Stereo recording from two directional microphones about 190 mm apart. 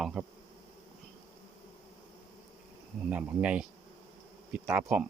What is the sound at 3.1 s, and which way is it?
Speech, 5° right (ahead or behind).